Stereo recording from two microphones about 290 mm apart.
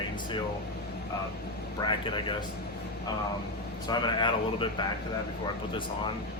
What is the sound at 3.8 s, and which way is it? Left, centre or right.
Speech, centre.